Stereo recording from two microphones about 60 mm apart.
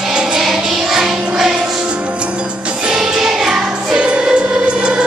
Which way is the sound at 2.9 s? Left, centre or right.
Centre.